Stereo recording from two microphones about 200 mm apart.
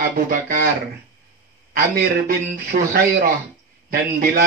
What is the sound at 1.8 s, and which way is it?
Speech, 45° right (ahead or behind).